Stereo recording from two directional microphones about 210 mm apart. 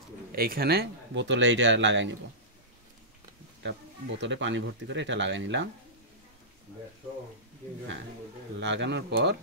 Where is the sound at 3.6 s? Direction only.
60° right (ahead or behind).